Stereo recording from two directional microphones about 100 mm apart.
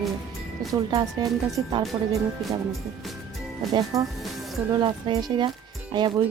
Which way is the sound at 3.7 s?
35° right (ahead or behind).